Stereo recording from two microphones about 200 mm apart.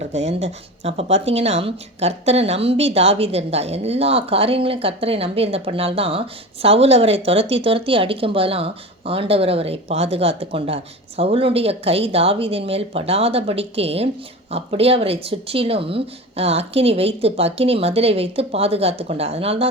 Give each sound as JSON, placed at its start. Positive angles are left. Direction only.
{"t": 0.1, "sound": "speech", "side_deg": -35}